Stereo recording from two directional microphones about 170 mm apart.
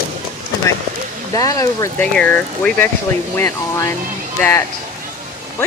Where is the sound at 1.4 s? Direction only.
20° left (ahead or behind).